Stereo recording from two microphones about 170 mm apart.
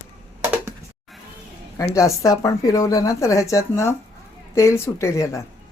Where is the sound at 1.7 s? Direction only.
20° left (ahead or behind).